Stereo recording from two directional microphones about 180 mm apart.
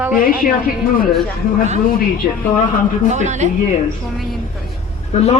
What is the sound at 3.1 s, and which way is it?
Speech, 40° right (ahead or behind).